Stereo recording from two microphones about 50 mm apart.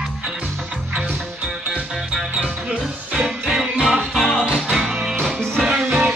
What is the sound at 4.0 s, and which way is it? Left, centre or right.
Music, centre.